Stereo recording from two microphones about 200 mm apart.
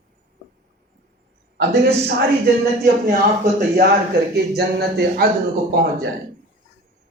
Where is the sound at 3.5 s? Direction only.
45° right (ahead or behind).